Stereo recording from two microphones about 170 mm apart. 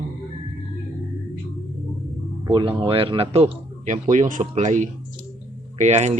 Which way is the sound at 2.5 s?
25° right (ahead or behind).